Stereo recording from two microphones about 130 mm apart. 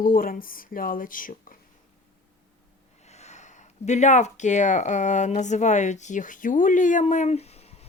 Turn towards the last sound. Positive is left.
turn(degrees=50)  # may be behind; listen again after turning